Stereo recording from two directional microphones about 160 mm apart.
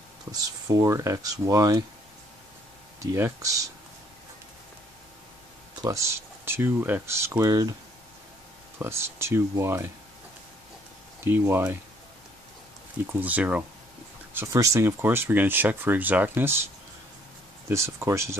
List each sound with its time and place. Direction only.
0.3 s speech: 25° right (ahead or behind)
3.0 s speech: 20° right (ahead or behind)
5.8 s speech: 20° right (ahead or behind)
8.7 s speech: 15° right (ahead or behind)
11.2 s speech: 15° right (ahead or behind)
13.0 s speech: 10° right (ahead or behind)
17.6 s speech: 15° right (ahead or behind)